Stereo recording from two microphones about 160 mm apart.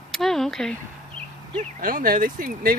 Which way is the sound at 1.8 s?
60° right (ahead or behind).